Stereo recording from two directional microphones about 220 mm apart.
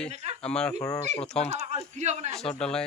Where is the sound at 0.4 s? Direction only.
5° left (ahead or behind).